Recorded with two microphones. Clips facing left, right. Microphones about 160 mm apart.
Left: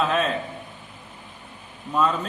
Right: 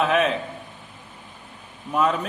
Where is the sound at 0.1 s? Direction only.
75° right (ahead or behind).